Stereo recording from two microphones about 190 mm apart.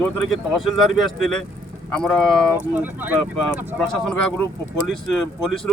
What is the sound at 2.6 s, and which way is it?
Speech, 10° right (ahead or behind).